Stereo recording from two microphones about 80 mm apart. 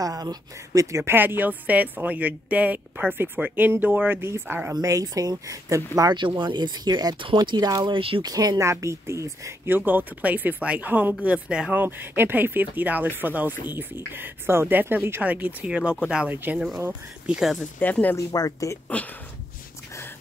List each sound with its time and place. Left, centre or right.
0.0 s speech: right
1.0 s speech: right
4.8 s speech: right
6.1 s speech: right
7.8 s speech: right
8.3 s speech: right
8.5 s speech: right
9.7 s speech: right
11.7 s speech: right
16.5 s speech: centre
18.1 s speech: left